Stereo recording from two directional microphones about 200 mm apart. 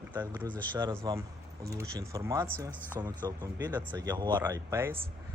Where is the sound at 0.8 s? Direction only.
20° right (ahead or behind).